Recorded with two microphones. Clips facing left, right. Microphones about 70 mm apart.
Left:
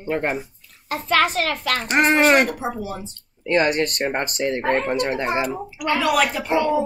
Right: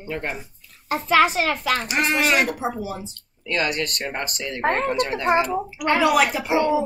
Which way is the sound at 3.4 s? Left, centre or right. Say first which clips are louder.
Left 5 dB; left.